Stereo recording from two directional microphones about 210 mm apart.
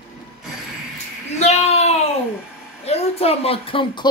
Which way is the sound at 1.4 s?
30° left (ahead or behind).